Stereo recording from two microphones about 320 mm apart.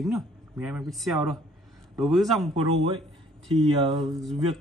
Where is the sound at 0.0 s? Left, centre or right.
Centre.